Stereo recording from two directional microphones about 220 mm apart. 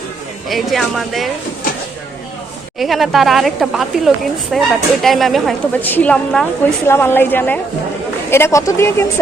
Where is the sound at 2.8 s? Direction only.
Centre (ahead or behind).